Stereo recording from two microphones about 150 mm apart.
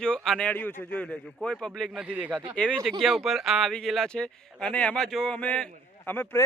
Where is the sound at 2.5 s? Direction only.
5° left (ahead or behind).